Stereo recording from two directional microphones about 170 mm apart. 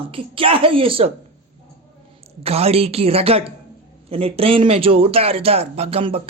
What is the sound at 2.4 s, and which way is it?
A man's voice, 35° right (ahead or behind).